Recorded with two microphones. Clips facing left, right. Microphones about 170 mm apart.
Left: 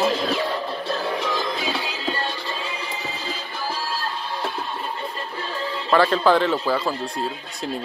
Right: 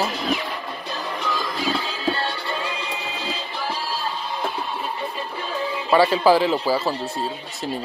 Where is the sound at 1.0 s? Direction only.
20° left (ahead or behind).